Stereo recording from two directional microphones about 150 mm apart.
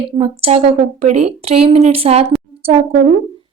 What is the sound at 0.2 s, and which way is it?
A woman's voice, 40° right (ahead or behind).